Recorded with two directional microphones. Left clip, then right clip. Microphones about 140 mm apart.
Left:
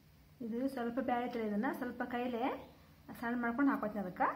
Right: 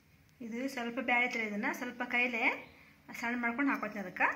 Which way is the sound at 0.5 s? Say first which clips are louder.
Even; 25° right (ahead or behind).